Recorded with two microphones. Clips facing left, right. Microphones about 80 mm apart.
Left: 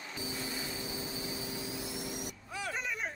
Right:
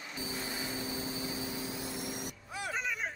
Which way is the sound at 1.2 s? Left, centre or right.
Right.